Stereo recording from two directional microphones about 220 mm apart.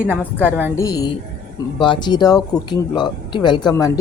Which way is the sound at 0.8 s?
15° left (ahead or behind).